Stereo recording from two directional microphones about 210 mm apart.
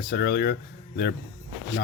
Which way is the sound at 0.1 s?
50° left (ahead or behind).